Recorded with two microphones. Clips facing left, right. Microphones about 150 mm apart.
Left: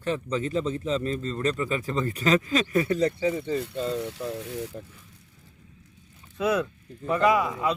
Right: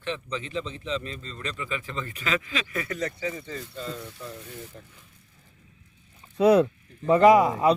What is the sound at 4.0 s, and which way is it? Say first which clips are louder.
Speech: left 9 dB; 75° left (ahead or behind).